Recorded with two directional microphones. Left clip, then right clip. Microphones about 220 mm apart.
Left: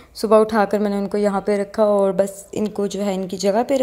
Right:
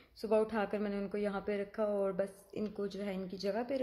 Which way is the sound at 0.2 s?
25° left (ahead or behind).